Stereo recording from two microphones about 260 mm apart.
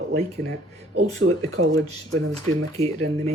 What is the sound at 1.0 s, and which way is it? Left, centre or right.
Speech, right.